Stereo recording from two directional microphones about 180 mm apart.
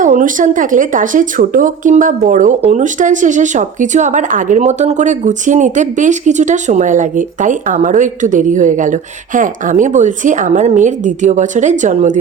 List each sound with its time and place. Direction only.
0.0 s speech: 45° right (ahead or behind)